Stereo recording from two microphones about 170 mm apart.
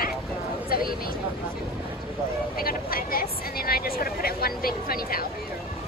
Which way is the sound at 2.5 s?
60° left (ahead or behind).